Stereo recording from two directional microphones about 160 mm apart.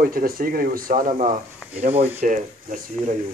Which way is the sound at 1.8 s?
40° right (ahead or behind).